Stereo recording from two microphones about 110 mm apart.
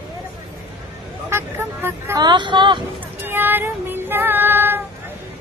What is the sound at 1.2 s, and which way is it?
Vehicle, 20° right (ahead or behind).